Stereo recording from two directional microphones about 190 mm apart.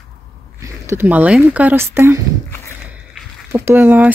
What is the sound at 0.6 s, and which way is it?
Speech, 15° right (ahead or behind).